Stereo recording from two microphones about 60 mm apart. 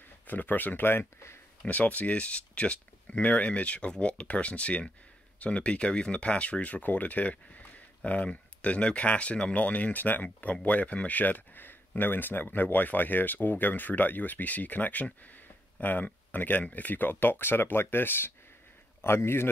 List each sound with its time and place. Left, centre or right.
0.3 s speech: left
1.7 s speech: left